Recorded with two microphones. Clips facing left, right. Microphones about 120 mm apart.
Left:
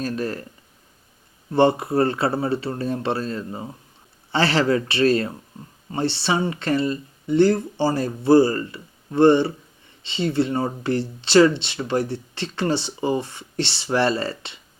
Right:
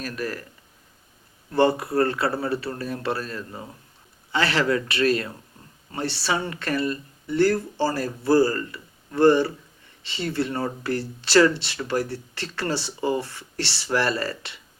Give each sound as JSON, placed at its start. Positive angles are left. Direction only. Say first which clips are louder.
{"t": 0.0, "sound": "speech", "louder": "left 4 dB", "side_deg": 30}
{"t": 1.5, "sound": "speech", "louder": "left 2 dB", "side_deg": 25}